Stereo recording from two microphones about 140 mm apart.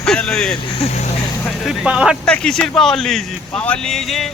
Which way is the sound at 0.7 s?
50° left (ahead or behind).